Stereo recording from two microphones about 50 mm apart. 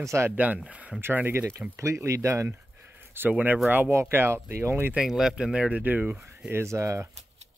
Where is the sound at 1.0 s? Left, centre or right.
Right.